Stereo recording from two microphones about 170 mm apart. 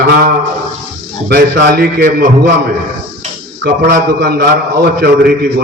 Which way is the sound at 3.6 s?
75° right (ahead or behind).